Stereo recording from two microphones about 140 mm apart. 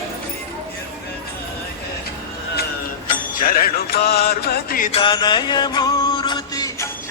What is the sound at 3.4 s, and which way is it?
Music, 90° left.